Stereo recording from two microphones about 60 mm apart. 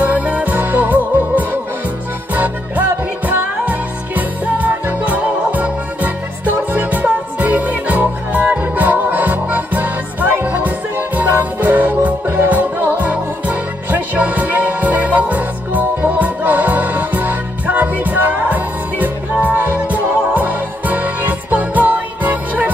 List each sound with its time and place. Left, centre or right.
0.0 s music: right